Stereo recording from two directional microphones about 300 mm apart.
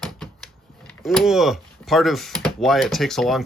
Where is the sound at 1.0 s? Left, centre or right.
Centre.